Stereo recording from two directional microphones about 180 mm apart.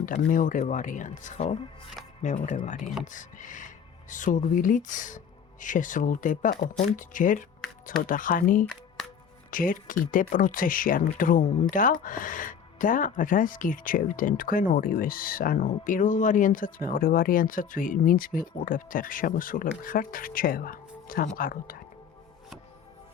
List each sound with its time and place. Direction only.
0.0 s speech: 45° left (ahead or behind)
8.6 s music: 5° left (ahead or behind)
9.5 s speech: 50° left (ahead or behind)